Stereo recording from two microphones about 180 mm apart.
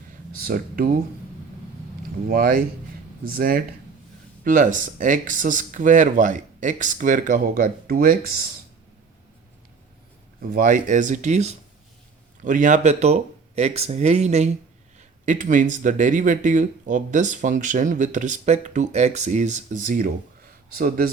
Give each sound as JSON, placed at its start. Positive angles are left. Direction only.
{"t": 0.3, "sound": "speech", "side_deg": -55}
{"t": 2.2, "sound": "speech", "side_deg": -55}
{"t": 10.5, "sound": "speech", "side_deg": -45}